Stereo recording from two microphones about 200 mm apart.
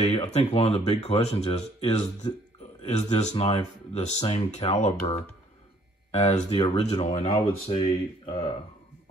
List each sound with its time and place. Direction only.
0.1 s speech: 35° left (ahead or behind)